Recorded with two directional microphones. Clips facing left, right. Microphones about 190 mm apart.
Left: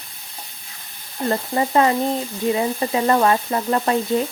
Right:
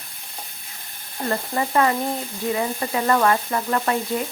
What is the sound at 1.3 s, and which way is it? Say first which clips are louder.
Speech: left 3 dB; 25° left (ahead or behind).